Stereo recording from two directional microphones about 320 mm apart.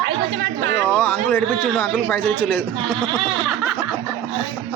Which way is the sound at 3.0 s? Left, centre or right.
Centre.